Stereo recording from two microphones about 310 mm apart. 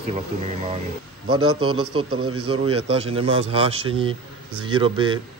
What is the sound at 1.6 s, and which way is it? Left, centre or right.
Speech, centre.